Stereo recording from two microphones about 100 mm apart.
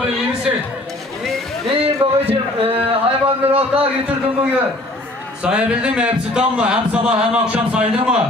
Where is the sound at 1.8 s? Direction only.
75° right (ahead or behind).